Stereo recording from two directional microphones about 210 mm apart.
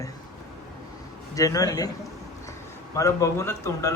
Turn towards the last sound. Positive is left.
turn(degrees=15)  # may be behind; listen again after turning